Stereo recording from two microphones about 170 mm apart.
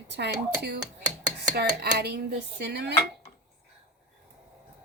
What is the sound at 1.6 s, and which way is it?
Speech, 70° right (ahead or behind).